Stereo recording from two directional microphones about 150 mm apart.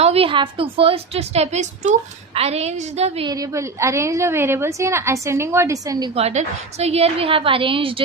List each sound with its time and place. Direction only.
0.0 s a woman's voice: 40° right (ahead or behind)
3.2 s a woman's voice: 20° right (ahead or behind)
6.1 s a woman's voice: 45° right (ahead or behind)